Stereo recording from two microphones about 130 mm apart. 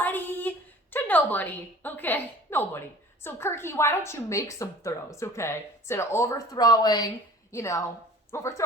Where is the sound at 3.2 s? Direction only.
20° left (ahead or behind).